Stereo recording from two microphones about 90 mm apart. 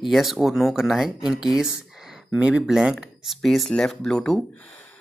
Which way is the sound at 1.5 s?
5° right (ahead or behind).